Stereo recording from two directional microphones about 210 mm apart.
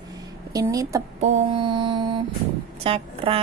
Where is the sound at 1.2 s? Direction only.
30° right (ahead or behind).